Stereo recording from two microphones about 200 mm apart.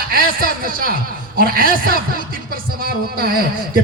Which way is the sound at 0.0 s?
45° right (ahead or behind).